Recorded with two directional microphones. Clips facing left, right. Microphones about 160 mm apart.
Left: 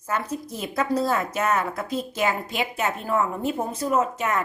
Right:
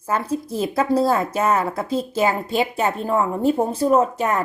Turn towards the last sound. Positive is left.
turn(degrees=-35)  # may be behind; listen again after turning